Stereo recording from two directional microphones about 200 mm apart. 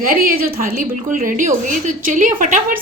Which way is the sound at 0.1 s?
45° right (ahead or behind).